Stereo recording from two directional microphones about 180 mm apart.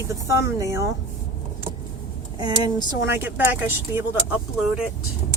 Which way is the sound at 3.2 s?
10° right (ahead or behind).